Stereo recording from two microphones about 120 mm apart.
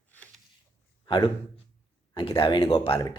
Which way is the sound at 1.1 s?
45° left (ahead or behind).